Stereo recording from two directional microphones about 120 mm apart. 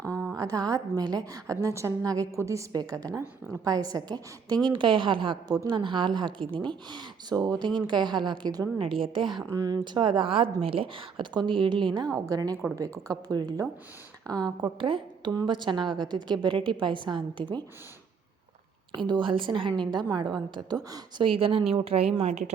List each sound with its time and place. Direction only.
0.3 s a woman's voice: 30° right (ahead or behind)
8.8 s speech: 50° right (ahead or behind)
9.5 s speech: 30° right (ahead or behind)
12.1 s a woman's voice: 30° right (ahead or behind)
18.9 s a woman's voice: 40° right (ahead or behind)
21.2 s speech: 50° right (ahead or behind)
22.2 s speech: 70° right (ahead or behind)